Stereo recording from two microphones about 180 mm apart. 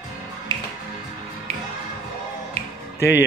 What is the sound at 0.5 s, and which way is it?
Music, 25° right (ahead or behind).